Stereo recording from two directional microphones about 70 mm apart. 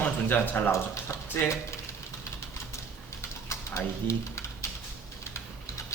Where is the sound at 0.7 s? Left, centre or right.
Left.